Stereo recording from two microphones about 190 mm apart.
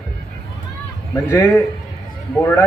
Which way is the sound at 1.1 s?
15° left (ahead or behind).